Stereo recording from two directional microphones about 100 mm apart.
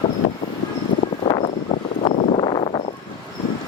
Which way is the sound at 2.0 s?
60° left (ahead or behind).